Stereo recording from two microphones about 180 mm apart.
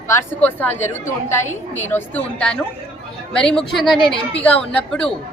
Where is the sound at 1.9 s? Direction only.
5° left (ahead or behind).